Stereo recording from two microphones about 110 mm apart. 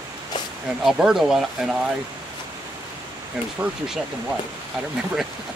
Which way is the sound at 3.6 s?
10° right (ahead or behind).